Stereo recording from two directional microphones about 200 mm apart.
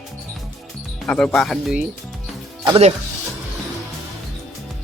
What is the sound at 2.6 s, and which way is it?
Speech, 25° right (ahead or behind).